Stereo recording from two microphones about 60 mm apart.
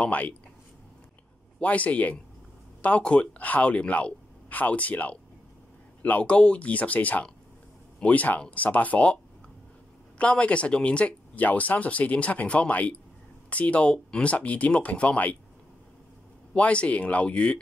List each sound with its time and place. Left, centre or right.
0.0 s speech: left
1.6 s speech: left
16.5 s speech: left